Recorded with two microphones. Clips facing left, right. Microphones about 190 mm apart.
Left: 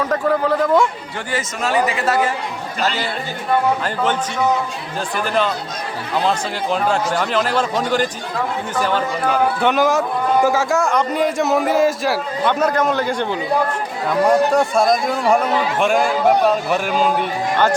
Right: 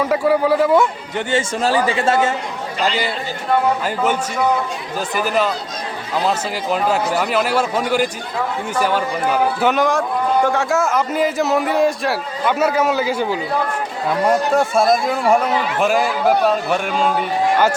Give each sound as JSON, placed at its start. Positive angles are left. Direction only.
{"t": 0.0, "sound": "speech", "side_deg": -10}
{"t": 1.3, "sound": "speech", "side_deg": -30}
{"t": 2.8, "sound": "speech", "side_deg": -10}